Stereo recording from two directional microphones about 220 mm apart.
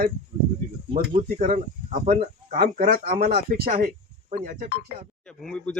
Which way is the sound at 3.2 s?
45° right (ahead or behind).